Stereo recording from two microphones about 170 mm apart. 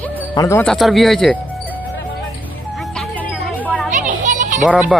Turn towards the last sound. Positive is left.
turn(degrees=-5)  # may be behind; listen again after turning